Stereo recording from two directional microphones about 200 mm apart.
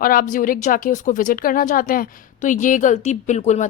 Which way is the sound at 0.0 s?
45° left (ahead or behind).